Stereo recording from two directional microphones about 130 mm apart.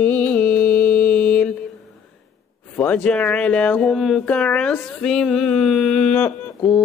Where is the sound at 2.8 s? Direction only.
10° left (ahead or behind).